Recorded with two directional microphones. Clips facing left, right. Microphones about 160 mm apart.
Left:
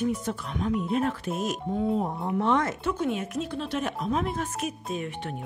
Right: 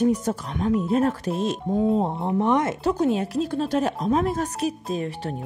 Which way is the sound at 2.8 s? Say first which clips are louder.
Right 6 dB; 35° right (ahead or behind).